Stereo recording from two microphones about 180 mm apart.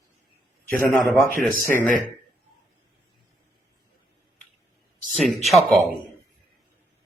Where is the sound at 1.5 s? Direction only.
50° right (ahead or behind).